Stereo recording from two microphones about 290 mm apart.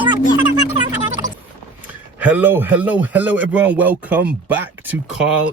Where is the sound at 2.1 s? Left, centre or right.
Centre.